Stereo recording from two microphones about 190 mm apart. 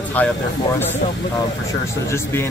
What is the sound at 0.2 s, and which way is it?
Speech, 10° left (ahead or behind).